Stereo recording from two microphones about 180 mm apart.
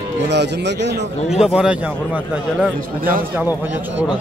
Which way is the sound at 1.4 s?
5° right (ahead or behind).